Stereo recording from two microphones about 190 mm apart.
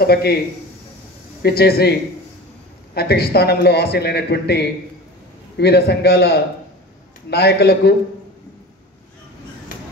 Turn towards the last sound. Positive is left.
turn(degrees=60)  # may be behind; listen again after turning